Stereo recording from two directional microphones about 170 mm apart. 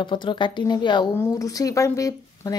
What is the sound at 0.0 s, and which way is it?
Speech, 30° left (ahead or behind).